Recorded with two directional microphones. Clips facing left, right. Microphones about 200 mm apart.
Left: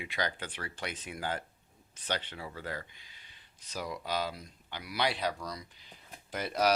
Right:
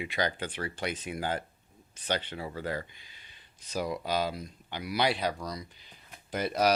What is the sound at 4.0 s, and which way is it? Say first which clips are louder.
Speech: right 4 dB; 15° right (ahead or behind).